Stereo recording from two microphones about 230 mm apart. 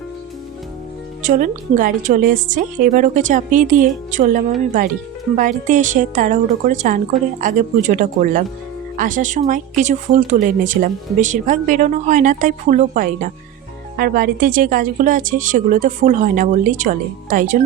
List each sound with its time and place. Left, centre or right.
1.2 s speech: right